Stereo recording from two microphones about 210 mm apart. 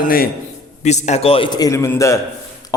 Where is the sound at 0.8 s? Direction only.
35° left (ahead or behind).